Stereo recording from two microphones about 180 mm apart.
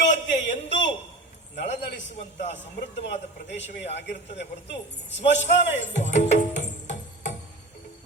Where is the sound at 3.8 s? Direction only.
80° left.